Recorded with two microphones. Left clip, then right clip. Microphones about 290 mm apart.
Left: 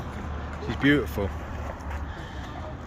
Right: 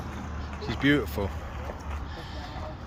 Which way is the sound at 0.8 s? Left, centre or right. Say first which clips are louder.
Left 2 dB; centre.